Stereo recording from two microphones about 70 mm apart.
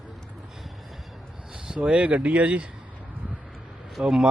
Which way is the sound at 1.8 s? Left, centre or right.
Centre.